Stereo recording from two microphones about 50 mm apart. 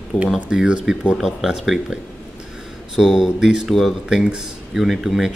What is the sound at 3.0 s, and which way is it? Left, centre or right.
Speech, centre.